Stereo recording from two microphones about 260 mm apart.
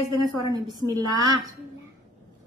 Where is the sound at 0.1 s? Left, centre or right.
Centre.